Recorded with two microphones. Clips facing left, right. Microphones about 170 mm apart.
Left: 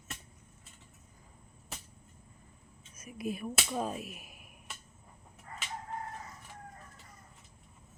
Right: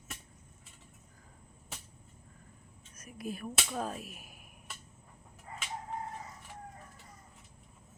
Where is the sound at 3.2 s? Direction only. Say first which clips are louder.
Left 3 dB; 35° right (ahead or behind).